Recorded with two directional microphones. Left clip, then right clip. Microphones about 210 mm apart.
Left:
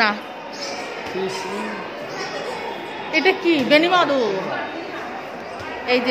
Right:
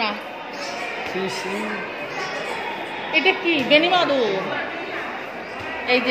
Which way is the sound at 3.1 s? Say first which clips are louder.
Left 1 dB; 25° left (ahead or behind).